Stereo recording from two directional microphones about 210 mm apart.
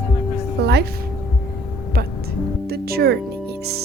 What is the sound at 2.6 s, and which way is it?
Music, 50° right (ahead or behind).